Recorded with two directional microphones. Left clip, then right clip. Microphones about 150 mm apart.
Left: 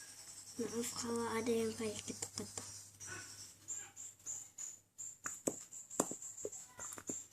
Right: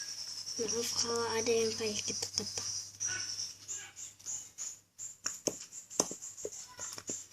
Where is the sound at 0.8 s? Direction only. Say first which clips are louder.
Right 6 dB; 30° left (ahead or behind).